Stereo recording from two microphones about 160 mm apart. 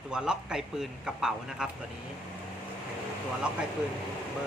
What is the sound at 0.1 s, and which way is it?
Speech, 5° right (ahead or behind).